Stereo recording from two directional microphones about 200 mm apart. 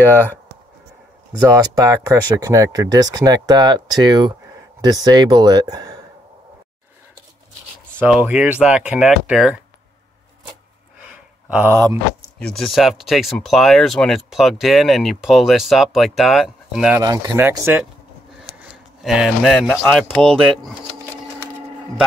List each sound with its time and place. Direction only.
1.4 s speech: 20° right (ahead or behind)
8.0 s speech: 10° right (ahead or behind)
11.4 s speech: 10° right (ahead or behind)
12.4 s speech: 5° left (ahead or behind)
17.0 s speech: 20° right (ahead or behind); by 20.5 s centre (ahead or behind)